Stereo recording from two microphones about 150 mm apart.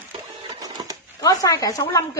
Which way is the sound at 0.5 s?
25° right (ahead or behind).